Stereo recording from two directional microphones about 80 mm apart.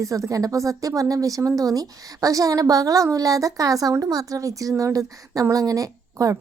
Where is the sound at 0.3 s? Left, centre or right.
Right.